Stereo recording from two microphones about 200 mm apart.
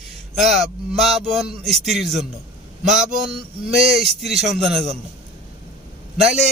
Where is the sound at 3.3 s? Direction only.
30° right (ahead or behind).